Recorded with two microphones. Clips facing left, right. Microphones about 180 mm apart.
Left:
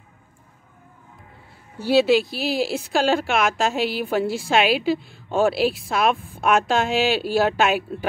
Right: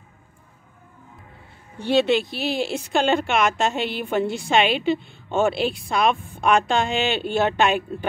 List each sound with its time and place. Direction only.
1.8 s speech: 5° left (ahead or behind)